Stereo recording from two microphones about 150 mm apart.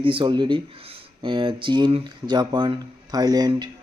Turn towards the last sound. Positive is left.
turn(degrees=-25)  # may be behind; listen again after turning